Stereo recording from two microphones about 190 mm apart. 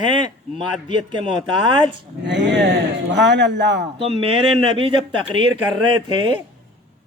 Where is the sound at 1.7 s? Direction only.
25° right (ahead or behind).